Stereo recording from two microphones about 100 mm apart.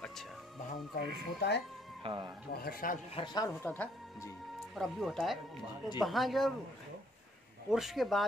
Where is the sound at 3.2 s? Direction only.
40° left (ahead or behind).